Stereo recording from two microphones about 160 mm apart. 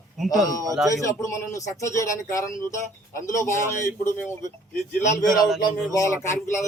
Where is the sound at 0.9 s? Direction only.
20° left (ahead or behind).